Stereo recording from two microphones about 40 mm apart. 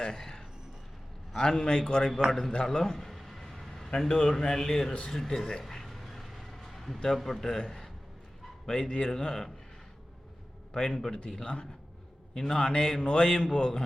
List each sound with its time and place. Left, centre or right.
0.0 s a man's voice: centre
2.7 s a sound: centre
4.1 s speech: centre
5.0 s a sound: centre
7.2 s speech: centre
10.8 s speech: centre
11.4 s a man's voice: left
12.3 s a man's voice: centre